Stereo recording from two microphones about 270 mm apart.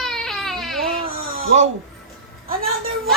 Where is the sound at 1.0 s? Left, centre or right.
Right.